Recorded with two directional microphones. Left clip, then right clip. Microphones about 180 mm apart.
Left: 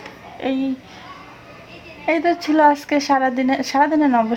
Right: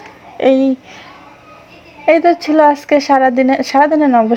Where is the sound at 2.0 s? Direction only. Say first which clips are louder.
Right 8 dB; 30° right (ahead or behind).